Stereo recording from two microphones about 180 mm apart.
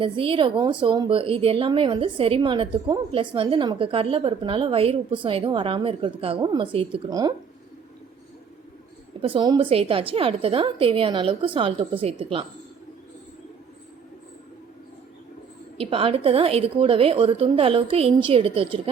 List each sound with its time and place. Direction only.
0.0 s a woman's voice: 30° right (ahead or behind)
9.2 s a woman's voice: 25° right (ahead or behind)
15.8 s a woman's voice: 30° right (ahead or behind)